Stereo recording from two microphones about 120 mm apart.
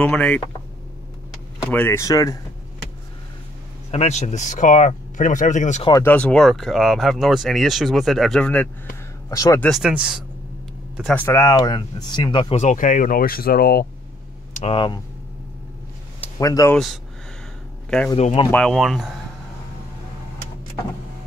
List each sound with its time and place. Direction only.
0.0 s speech: 10° left (ahead or behind)
1.7 s speech: 15° left (ahead or behind)
3.9 s speech: 70° left (ahead or behind); by 5.9 s 85° left
6.0 s speech: 10° left (ahead or behind)
9.3 s speech: 30° left (ahead or behind)
9.7 s speech: 5° right (ahead or behind)
11.1 s speech: 20° left (ahead or behind); by 12.5 s 40° left (ahead or behind)
12.5 s speech: 85° left
14.5 s a sound: 60° left (ahead or behind)
16.3 s speech: 30° left (ahead or behind)
16.7 s speech: centre (ahead or behind)
18.1 s speech: 50° left (ahead or behind)
18.5 s speech: 10° left (ahead or behind)
18.8 s speech: centre (ahead or behind)